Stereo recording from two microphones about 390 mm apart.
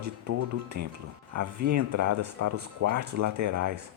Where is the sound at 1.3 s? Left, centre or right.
Right.